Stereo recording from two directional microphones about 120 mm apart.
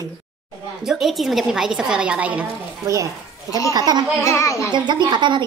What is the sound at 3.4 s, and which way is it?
Child singing, 25° left (ahead or behind).